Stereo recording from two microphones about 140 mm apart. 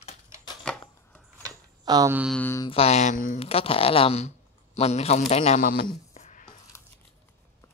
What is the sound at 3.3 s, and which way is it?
Speech, 45° left (ahead or behind).